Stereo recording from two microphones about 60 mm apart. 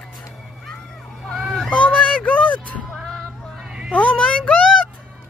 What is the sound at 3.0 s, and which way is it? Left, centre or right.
Music, centre.